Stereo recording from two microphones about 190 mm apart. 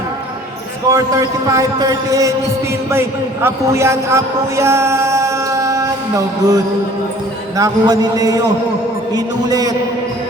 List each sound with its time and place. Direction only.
0.9 s a man's voice: 15° right (ahead or behind)